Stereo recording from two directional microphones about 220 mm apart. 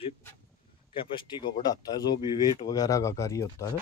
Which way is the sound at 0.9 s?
20° left (ahead or behind).